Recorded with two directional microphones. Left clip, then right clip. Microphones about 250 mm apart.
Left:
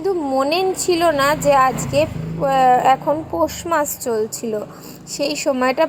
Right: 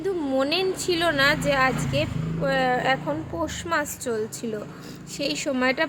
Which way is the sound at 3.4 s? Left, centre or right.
Centre.